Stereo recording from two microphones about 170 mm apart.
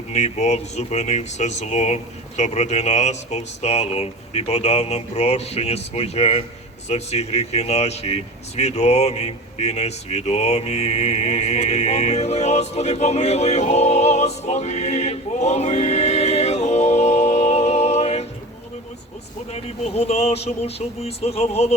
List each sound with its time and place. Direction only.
0.1 s speech: 40° left (ahead or behind)
19.8 s speech: 35° left (ahead or behind)